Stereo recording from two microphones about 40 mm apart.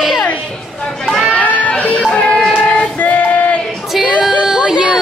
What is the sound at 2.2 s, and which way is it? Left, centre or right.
Music, left.